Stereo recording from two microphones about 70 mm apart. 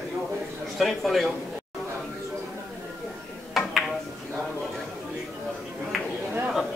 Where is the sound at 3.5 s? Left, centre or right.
Centre.